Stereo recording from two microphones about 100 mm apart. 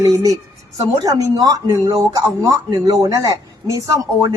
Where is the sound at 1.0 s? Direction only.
40° right (ahead or behind).